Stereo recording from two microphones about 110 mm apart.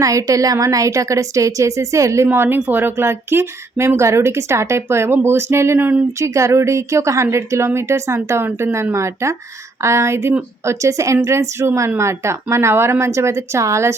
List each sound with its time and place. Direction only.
0.0 s speech: 30° right (ahead or behind)